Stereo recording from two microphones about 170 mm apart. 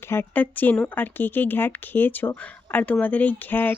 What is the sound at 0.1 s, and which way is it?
A woman's voice, 10° left (ahead or behind).